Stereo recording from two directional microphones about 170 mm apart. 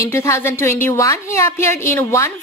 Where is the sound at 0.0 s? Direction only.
15° left (ahead or behind).